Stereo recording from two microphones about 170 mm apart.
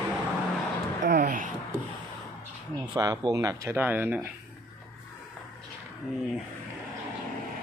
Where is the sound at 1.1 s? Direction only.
65° right (ahead or behind).